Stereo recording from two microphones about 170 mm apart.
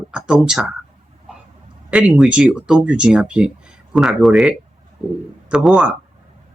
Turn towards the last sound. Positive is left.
turn(degrees=-5)  # may be behind; listen again after turning